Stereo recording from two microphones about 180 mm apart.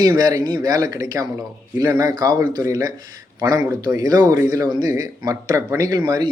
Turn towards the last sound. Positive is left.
turn(degrees=-20)  # may be behind; listen again after turning